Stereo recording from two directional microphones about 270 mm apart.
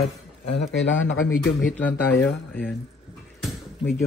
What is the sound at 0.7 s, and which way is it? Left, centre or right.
Speech, left.